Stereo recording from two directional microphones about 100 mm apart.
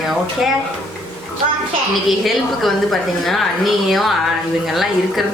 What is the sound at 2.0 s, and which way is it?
A woman's voice, centre (ahead or behind).